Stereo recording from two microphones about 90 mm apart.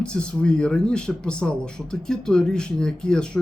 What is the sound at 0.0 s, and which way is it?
Speech, 10° left (ahead or behind).